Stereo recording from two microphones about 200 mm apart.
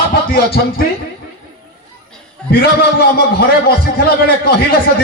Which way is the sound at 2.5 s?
50° left (ahead or behind).